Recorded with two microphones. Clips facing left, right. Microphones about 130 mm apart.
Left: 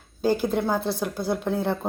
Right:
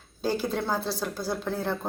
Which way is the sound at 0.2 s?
15° left (ahead or behind).